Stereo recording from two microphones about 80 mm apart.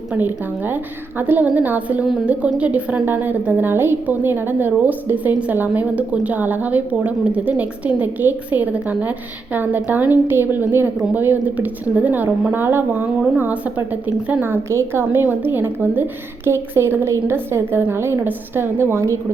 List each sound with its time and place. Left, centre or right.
0.1 s a woman's voice: right